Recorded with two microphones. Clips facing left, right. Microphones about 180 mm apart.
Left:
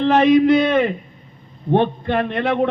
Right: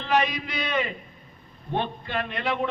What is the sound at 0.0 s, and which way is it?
A man's voice, 55° left (ahead or behind).